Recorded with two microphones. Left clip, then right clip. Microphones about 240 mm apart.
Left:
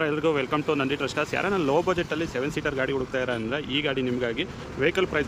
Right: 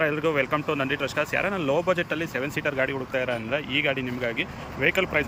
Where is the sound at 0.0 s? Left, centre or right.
Centre.